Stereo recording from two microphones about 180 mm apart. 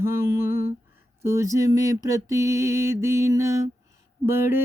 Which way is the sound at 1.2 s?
15° right (ahead or behind).